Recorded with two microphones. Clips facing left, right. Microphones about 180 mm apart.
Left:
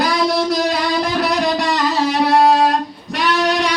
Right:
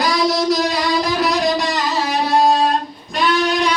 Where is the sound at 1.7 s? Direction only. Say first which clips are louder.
Left 3 dB; 70° left (ahead or behind).